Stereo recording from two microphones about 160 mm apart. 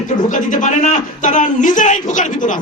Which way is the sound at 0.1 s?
50° left (ahead or behind).